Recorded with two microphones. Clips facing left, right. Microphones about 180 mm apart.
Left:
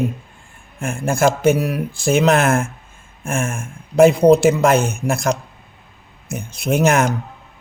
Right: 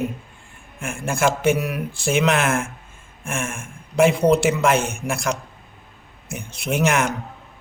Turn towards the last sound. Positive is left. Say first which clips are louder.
# left 5 dB
turn(degrees=40)  # may be behind; listen again after turning